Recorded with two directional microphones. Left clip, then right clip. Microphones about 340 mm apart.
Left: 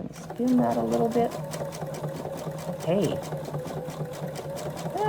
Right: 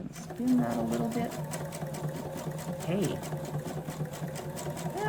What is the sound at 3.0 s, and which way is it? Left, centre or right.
Sewing machine, centre.